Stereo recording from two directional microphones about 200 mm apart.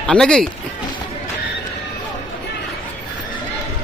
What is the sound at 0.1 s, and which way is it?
Speech, 5° left (ahead or behind).